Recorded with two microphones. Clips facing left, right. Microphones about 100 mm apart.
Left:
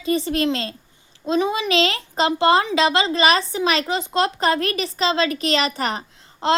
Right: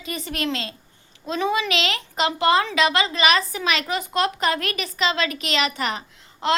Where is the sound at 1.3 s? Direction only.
25° left (ahead or behind).